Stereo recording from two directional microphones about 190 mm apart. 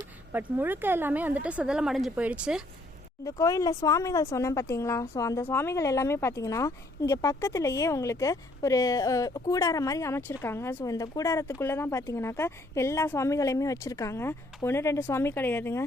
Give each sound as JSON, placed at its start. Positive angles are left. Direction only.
{"t": 0.3, "sound": "a woman's voice", "side_deg": -10}
{"t": 3.2, "sound": "speech", "side_deg": 15}